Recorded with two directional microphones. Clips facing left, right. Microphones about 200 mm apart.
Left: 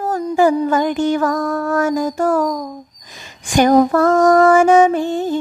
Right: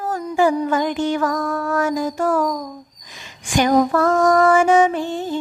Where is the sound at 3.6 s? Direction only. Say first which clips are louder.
Left 4 dB; 45° left (ahead or behind).